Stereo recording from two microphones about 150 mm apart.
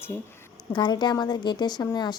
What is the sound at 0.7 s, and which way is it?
Speech, 30° left (ahead or behind).